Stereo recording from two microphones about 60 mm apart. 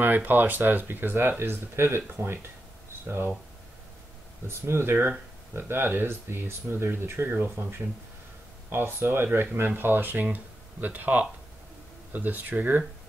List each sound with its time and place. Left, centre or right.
0.0 s speech: right
3.1 s speech: right
4.5 s speech: right